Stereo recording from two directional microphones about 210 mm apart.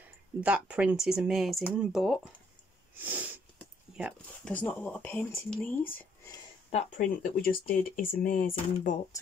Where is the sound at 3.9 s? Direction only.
5° right (ahead or behind).